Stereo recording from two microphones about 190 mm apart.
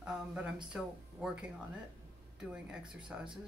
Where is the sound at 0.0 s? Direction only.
5° right (ahead or behind).